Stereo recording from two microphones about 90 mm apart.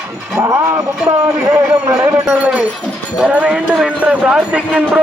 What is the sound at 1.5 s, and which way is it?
Speech, 35° right (ahead or behind).